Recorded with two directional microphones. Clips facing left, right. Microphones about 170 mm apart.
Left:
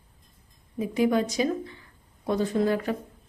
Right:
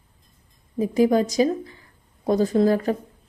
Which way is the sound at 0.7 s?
40° right (ahead or behind).